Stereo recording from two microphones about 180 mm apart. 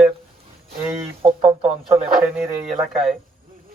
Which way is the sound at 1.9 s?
15° right (ahead or behind).